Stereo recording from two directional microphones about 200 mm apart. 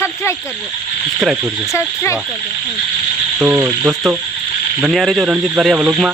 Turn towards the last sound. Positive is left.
turn(degrees=0)  # may be behind; listen again after turning